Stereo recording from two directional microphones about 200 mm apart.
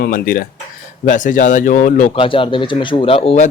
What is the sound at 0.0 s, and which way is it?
Speech, 45° left (ahead or behind).